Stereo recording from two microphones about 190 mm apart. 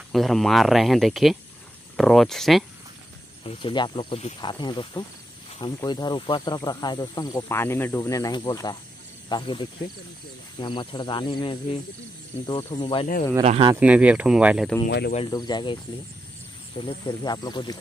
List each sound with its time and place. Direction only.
0.1 s speech: centre (ahead or behind)
3.4 s speech: 25° left (ahead or behind)
13.4 s speech: 30° right (ahead or behind)
13.7 s speech: 5° right (ahead or behind)
14.9 s speech: 60° left (ahead or behind)
15.1 s speech: 25° left (ahead or behind)
17.0 s speech: 20° left (ahead or behind)